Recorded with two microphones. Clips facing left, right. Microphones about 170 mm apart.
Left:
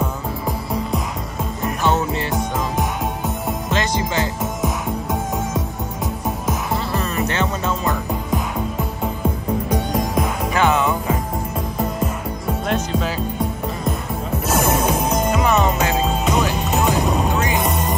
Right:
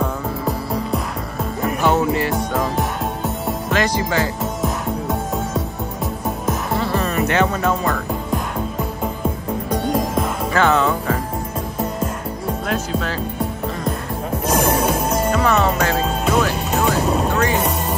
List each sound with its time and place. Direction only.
2.1 s music: 20° left (ahead or behind)
4.4 s music: centre (ahead or behind)
6.8 s music: 35° left (ahead or behind)
9.7 s music: centre (ahead or behind)
10.5 s music: 15° left (ahead or behind)
12.6 s music: centre (ahead or behind)
14.4 s music: 5° left (ahead or behind)